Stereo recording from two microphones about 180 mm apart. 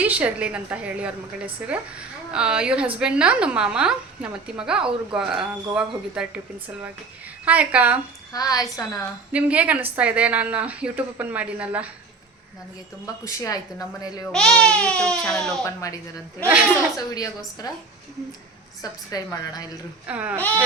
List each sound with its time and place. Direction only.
0.0 s a woman's voice: 10° right (ahead or behind)
7.4 s speech: 10° right (ahead or behind)
8.3 s a woman's voice: 20° left (ahead or behind)
9.3 s speech: 10° right (ahead or behind)
13.2 s a woman's voice: 20° left (ahead or behind)
14.3 s a woman's voice: 5° left (ahead or behind)
15.6 s a woman's voice: 20° left (ahead or behind)
17.0 s a woman's voice: 20° left (ahead or behind)
18.8 s a woman's voice: 20° left (ahead or behind)
20.1 s speech: 10° right (ahead or behind)